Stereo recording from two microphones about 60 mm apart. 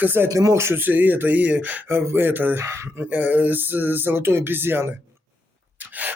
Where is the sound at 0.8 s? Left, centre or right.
Right.